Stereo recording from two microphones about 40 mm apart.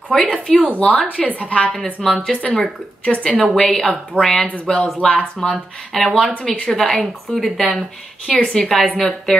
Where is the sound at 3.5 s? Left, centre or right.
Centre.